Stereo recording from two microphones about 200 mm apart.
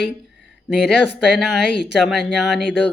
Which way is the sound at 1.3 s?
Centre (ahead or behind).